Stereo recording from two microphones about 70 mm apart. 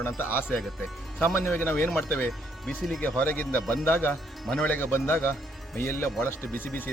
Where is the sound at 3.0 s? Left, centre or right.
Left.